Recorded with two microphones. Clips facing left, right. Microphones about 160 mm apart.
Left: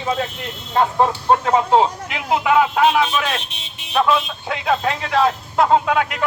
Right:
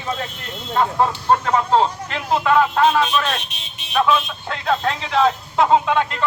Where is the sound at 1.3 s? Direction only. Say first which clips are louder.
Left 2 dB; 10° left (ahead or behind).